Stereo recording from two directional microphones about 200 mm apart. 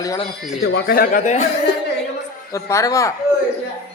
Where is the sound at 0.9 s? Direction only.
45° left (ahead or behind).